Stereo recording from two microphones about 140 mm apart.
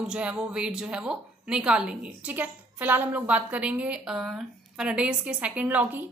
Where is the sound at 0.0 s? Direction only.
5° right (ahead or behind).